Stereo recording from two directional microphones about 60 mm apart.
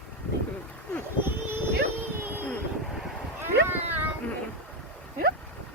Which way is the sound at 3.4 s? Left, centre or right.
Right.